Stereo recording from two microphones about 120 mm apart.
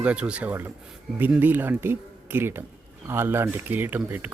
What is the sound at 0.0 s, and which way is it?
Speech, 10° right (ahead or behind).